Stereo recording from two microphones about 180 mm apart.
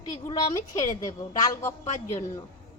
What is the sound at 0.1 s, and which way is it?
A woman's voice, 20° left (ahead or behind).